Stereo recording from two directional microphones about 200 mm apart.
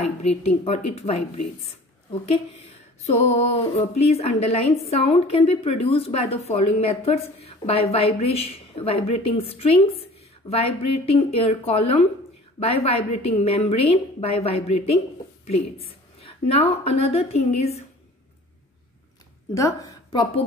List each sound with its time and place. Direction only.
0.0 s a woman's voice: 30° left (ahead or behind)
3.0 s a woman's voice: 30° left (ahead or behind)
19.5 s a woman's voice: 15° left (ahead or behind)